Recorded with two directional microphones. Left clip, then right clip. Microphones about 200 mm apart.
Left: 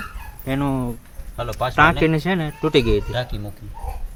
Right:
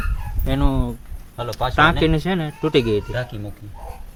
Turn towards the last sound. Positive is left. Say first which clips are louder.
# left 1 dB
turn(degrees=0)  # may be behind; listen again after turning